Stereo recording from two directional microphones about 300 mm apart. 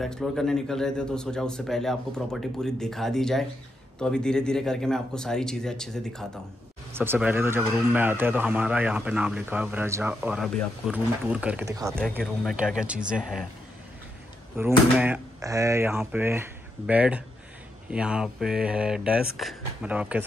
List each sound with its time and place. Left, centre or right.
0.0 s speech: centre
14.6 s speech: centre